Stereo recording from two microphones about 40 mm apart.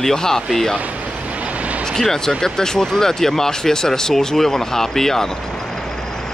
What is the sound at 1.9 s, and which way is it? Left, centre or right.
Speech, centre.